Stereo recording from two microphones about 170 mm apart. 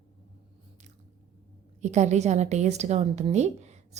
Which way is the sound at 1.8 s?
40° right (ahead or behind).